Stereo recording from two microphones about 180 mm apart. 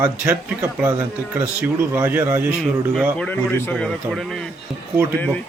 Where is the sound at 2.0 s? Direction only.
10° right (ahead or behind).